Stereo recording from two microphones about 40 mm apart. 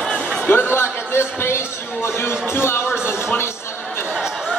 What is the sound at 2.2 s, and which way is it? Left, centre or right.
Music, left.